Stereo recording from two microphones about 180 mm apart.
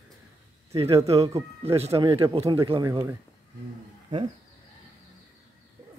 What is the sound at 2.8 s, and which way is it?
Speech, 20° right (ahead or behind).